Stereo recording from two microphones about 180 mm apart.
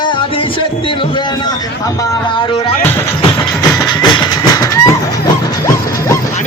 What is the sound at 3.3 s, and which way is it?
Music, 20° left (ahead or behind).